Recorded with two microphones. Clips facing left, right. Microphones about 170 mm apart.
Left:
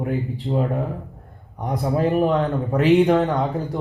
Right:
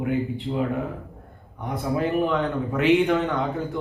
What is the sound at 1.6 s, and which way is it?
A man's voice, 35° left (ahead or behind).